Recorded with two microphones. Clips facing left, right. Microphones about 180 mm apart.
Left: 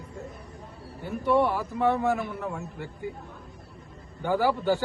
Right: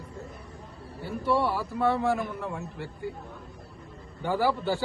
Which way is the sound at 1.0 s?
20° left (ahead or behind).